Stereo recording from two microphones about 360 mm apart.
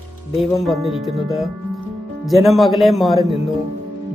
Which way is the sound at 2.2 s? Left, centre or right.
Centre.